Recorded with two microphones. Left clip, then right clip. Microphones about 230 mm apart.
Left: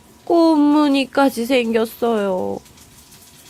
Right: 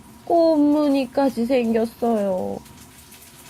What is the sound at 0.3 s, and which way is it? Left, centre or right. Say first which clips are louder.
Speech: left 3 dB; left.